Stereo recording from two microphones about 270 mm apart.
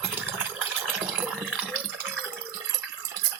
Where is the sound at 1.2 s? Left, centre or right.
Centre.